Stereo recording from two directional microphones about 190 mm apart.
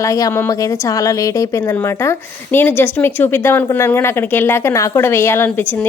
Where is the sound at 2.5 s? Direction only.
10° left (ahead or behind).